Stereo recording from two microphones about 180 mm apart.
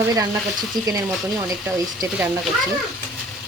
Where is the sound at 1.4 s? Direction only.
20° right (ahead or behind).